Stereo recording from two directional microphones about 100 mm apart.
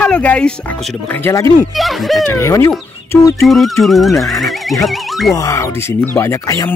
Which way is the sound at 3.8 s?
Centre (ahead or behind).